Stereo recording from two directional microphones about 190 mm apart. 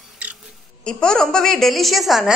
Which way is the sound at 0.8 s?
5° left (ahead or behind).